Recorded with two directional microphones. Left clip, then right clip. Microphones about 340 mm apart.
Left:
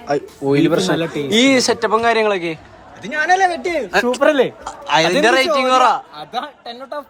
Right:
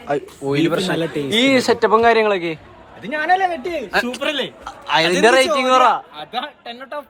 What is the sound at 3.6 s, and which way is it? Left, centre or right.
Speech, left.